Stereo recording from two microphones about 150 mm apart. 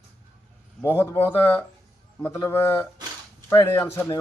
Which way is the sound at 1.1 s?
15° left (ahead or behind).